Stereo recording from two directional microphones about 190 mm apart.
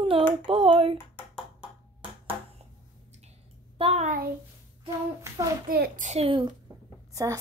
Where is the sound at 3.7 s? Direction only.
30° right (ahead or behind).